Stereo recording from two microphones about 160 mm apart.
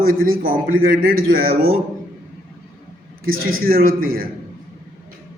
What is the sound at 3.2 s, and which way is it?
A man's voice, 65° right (ahead or behind).